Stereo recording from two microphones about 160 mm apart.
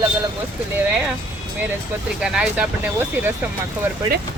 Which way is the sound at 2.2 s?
5° right (ahead or behind).